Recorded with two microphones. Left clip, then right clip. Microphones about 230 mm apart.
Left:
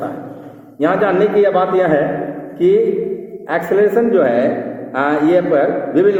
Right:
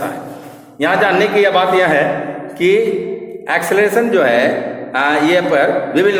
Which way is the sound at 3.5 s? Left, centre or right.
Right.